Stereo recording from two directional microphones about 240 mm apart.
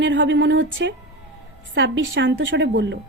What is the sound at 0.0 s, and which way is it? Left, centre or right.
A woman's voice, right.